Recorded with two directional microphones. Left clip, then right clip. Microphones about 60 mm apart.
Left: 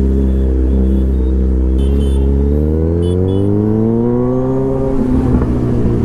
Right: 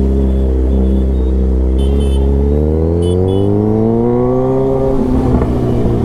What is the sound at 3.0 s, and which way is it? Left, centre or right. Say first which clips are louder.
Car: right 2 dB; right.